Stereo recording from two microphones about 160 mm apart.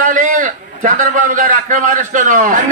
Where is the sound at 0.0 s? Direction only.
55° right (ahead or behind).